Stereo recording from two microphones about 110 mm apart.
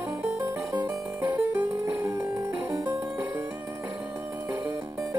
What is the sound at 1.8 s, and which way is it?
Music, 25° right (ahead or behind).